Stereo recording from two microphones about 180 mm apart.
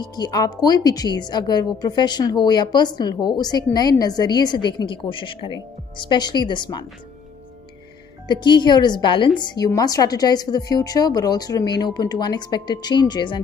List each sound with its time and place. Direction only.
0.0 s a woman's voice: 20° left (ahead or behind)
8.3 s a woman's voice: 25° left (ahead or behind)